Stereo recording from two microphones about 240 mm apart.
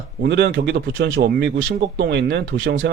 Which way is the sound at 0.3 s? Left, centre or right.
Right.